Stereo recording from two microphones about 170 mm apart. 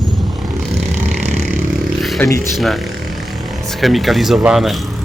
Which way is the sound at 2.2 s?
10° left (ahead or behind).